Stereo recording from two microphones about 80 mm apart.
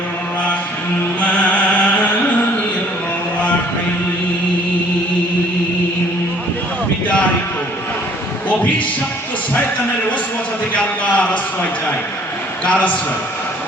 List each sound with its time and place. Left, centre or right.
1.2 s music: centre
11.0 s a sound: centre
12.6 s a man's voice: centre